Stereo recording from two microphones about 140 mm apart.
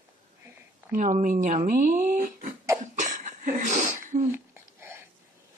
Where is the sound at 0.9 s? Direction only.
65° right (ahead or behind).